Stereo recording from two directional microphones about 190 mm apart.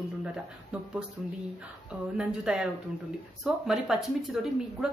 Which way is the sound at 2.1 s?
5° right (ahead or behind).